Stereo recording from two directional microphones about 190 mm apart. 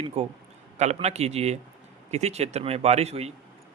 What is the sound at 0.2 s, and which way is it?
Speech, 35° right (ahead or behind).